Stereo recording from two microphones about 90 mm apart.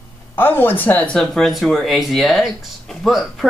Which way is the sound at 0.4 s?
25° left (ahead or behind).